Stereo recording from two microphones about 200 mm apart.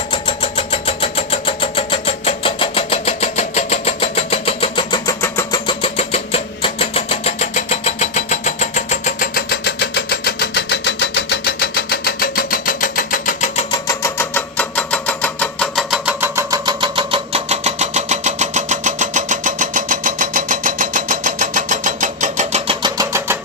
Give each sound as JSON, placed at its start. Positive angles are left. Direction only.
{"t": 0.1, "sound": "vehicle", "side_deg": 25}
{"t": 5.2, "sound": "vehicle", "side_deg": 15}
{"t": 5.6, "sound": "engine", "side_deg": 30}
{"t": 13.7, "sound": "engine", "side_deg": 15}